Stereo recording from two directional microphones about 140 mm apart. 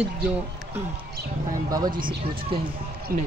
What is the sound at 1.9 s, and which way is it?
Speech, 85° right.